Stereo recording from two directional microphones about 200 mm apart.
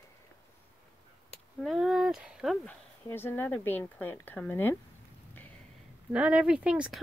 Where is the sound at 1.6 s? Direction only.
Centre (ahead or behind).